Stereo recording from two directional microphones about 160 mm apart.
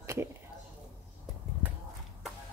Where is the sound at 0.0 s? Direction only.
15° right (ahead or behind).